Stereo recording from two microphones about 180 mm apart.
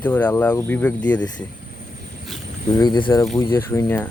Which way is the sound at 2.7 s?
25° left (ahead or behind).